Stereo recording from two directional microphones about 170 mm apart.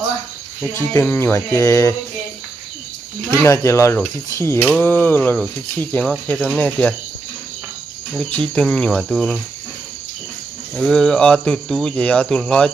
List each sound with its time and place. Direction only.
0.9 s speech: 15° left (ahead or behind)
3.4 s speech: 15° left (ahead or behind)
8.1 s speech: 5° left (ahead or behind)
10.8 s speech: 5° left (ahead or behind)